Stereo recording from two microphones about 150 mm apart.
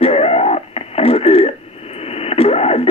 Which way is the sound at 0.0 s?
45° left (ahead or behind).